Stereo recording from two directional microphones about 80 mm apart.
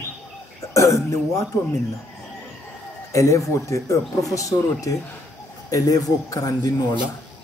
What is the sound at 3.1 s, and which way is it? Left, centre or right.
Speech, left.